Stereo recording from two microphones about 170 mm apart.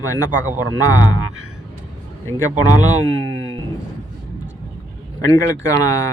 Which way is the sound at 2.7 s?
45° right (ahead or behind).